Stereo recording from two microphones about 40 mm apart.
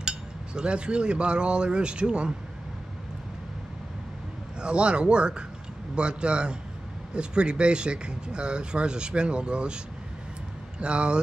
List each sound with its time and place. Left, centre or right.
0.6 s speech: right
4.6 s speech: right
10.8 s speech: right